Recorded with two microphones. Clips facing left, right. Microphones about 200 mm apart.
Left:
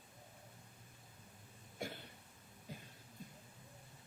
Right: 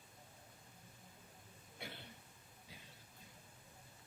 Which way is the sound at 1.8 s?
45° left (ahead or behind).